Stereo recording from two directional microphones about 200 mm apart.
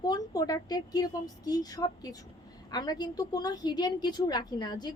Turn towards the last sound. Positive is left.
turn(degrees=20)  # may be behind; listen again after turning